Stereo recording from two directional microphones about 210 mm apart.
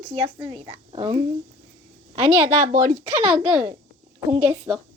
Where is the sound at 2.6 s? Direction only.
40° right (ahead or behind).